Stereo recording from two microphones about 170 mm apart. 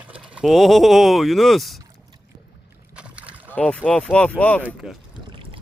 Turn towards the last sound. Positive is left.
turn(degrees=-30)  # may be behind; listen again after turning